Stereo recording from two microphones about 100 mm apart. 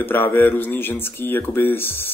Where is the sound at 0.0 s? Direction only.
20° left (ahead or behind).